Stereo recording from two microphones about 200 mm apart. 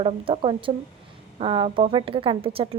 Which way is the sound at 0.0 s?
25° right (ahead or behind).